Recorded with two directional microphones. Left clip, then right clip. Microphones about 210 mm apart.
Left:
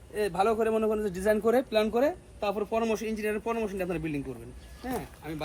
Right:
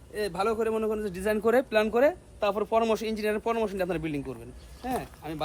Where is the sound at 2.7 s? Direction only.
35° right (ahead or behind).